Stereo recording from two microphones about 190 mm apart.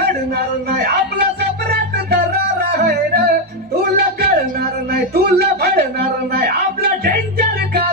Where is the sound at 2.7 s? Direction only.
55° right (ahead or behind).